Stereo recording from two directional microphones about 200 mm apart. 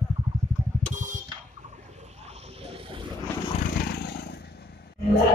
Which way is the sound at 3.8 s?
55° left (ahead or behind).